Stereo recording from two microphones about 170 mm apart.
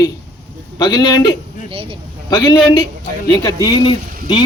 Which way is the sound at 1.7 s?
35° right (ahead or behind).